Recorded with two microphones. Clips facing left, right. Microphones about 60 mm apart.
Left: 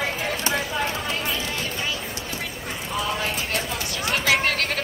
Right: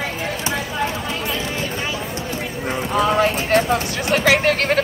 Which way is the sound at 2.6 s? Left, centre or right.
Right.